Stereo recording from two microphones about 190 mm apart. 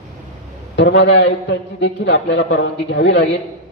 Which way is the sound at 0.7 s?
70° left (ahead or behind).